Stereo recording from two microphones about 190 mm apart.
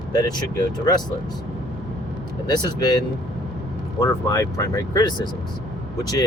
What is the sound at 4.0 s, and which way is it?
Speech, 15° left (ahead or behind).